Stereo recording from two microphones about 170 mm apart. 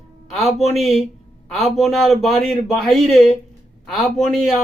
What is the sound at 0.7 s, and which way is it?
A man's voice, centre (ahead or behind).